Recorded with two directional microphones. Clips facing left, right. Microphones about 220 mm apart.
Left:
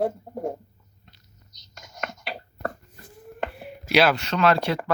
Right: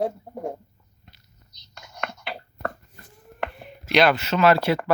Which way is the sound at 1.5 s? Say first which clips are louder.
Right 1 dB; 40° left (ahead or behind).